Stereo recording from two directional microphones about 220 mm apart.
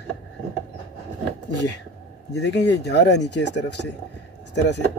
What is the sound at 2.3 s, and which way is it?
Speech, 50° left (ahead or behind).